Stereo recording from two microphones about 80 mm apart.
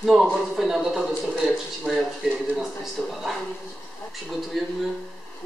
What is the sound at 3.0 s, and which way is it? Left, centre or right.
Speech, left.